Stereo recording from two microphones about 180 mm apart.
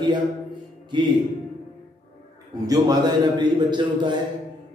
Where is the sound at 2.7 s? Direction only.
20° right (ahead or behind).